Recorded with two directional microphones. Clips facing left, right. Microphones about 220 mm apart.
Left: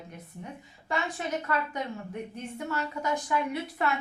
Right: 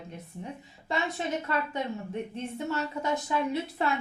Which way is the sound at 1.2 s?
25° right (ahead or behind).